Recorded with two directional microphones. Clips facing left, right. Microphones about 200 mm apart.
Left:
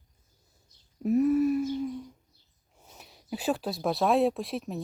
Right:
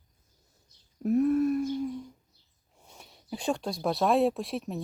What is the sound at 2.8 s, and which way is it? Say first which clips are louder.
Speech: left 1 dB; centre (ahead or behind).